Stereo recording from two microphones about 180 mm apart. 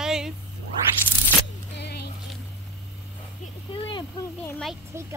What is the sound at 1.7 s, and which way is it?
Music, 65° left (ahead or behind).